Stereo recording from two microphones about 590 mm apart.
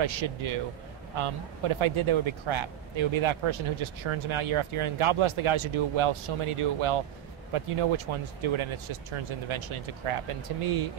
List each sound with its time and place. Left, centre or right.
0.0 s speech: right